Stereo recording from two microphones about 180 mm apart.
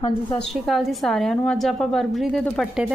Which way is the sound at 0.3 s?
5° left (ahead or behind).